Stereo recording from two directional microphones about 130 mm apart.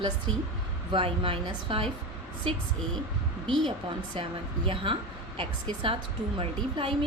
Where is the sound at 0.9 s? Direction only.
40° right (ahead or behind).